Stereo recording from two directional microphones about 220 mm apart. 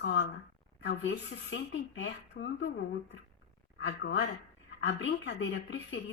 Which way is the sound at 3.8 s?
50° left (ahead or behind).